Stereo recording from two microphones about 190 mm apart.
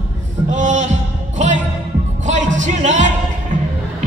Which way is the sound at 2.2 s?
40° right (ahead or behind).